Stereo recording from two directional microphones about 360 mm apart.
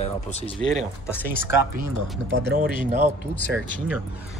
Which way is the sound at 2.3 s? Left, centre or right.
Right.